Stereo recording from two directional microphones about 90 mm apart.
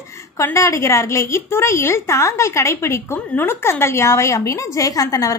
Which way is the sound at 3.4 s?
25° left (ahead or behind).